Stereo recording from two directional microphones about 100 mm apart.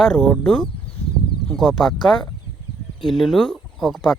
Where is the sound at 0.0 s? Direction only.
5° left (ahead or behind).